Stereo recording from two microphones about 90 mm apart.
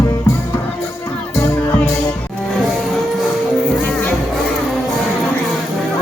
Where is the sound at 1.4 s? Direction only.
30° left (ahead or behind).